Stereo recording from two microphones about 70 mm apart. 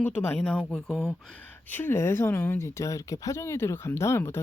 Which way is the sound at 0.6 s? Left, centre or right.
Centre.